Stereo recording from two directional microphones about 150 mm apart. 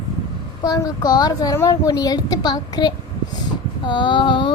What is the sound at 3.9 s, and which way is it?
Female singing, 30° left (ahead or behind).